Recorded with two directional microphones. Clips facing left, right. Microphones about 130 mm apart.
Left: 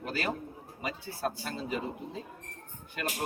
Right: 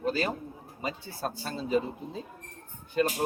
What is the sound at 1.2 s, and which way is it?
Speech, 30° right (ahead or behind).